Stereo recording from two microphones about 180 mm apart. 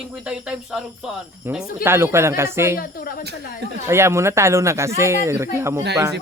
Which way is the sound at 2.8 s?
55° left (ahead or behind).